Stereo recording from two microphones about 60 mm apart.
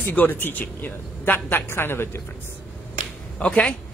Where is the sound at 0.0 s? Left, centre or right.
Left.